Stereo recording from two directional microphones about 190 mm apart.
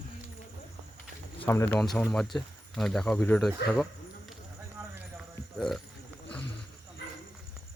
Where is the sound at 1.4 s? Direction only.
15° left (ahead or behind).